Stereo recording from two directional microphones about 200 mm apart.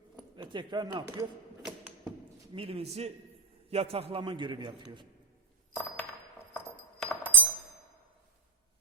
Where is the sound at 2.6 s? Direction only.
30° right (ahead or behind).